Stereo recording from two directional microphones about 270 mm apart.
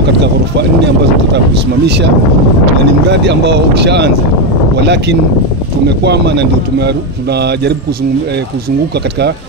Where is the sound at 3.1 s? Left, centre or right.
Right.